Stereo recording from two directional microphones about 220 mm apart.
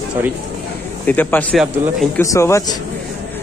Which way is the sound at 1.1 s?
5° left (ahead or behind).